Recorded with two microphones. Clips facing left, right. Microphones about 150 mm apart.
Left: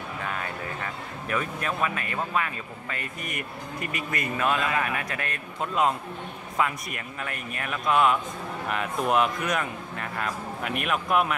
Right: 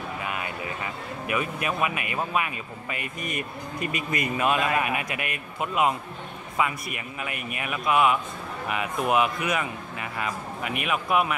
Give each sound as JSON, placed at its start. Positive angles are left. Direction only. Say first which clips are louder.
{"t": 0.2, "sound": "speech", "louder": "left 2 dB", "side_deg": -10}